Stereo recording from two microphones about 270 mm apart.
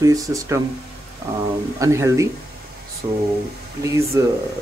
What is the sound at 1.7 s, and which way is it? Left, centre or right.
Speech, centre.